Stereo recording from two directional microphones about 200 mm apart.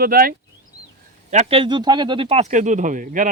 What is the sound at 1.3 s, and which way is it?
A man's voice, 35° right (ahead or behind).